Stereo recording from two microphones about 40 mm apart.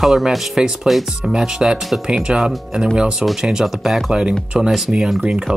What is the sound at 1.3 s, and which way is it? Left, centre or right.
Speech, centre.